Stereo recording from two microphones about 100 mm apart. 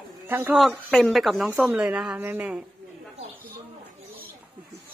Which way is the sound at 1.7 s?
10° right (ahead or behind).